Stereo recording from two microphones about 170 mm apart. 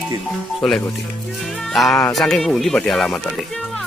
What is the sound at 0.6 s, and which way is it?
Speech, 5° left (ahead or behind).